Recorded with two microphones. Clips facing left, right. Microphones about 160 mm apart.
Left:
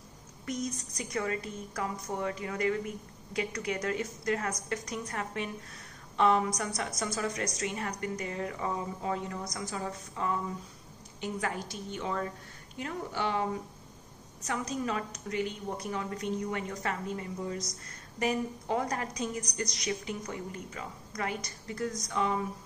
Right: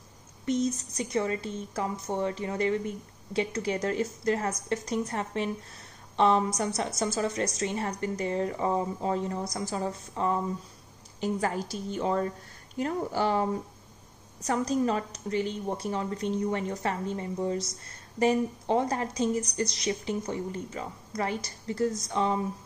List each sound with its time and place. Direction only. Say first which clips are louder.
0.5 s a woman's voice: right 8 dB; 25° right (ahead or behind)